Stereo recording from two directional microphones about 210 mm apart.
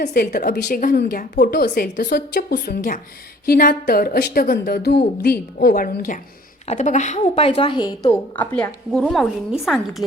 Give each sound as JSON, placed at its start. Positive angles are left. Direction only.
{"t": 0.0, "sound": "a woman's voice", "side_deg": 40}